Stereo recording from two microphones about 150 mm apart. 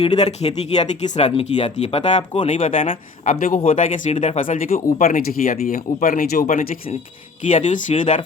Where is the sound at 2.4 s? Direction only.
50° left (ahead or behind); by 6.5 s 80° left.